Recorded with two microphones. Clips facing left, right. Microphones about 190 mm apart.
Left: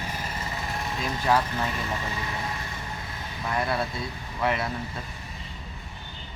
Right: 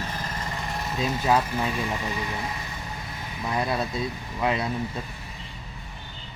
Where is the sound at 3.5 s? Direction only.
20° right (ahead or behind).